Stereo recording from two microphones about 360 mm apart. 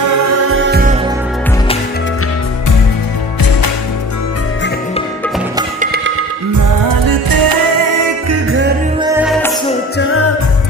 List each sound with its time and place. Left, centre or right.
0.0 s music: right
5.6 s music: right
6.5 s music: right
8.3 s music: right
9.0 s music: centre
9.9 s music: left